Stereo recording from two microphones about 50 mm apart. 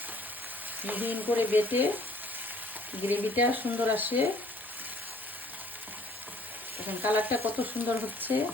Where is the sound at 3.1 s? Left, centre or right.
Right.